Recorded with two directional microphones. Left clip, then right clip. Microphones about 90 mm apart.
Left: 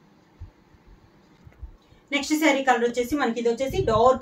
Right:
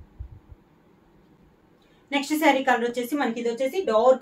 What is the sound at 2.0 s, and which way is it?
A woman's voice, 15° right (ahead or behind).